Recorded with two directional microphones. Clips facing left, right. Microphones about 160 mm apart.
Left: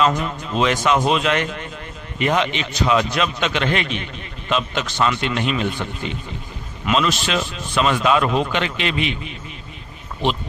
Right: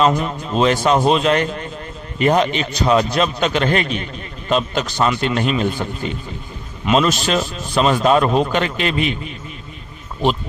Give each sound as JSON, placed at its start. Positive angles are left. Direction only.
{"t": 0.0, "sound": "a man's voice", "side_deg": -30}